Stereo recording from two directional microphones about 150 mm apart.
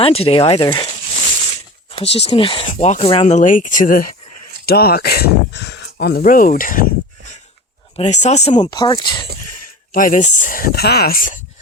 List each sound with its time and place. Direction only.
0.0 s speech: 40° left (ahead or behind)
1.9 s speech: 40° left (ahead or behind); by 4.1 s 65° left (ahead or behind)
4.6 s speech: 90° left; by 6.8 s 65° left (ahead or behind)
7.9 s speech: 50° left (ahead or behind)
8.5 s speech: 30° left (ahead or behind)
9.9 s speech: 60° left (ahead or behind)